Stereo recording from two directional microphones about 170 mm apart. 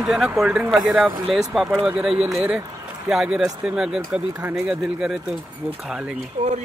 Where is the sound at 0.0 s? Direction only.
Centre (ahead or behind).